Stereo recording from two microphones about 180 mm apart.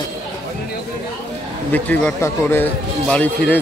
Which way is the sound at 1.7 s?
10° left (ahead or behind).